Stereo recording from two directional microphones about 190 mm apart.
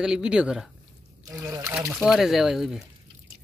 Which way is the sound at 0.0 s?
5° right (ahead or behind).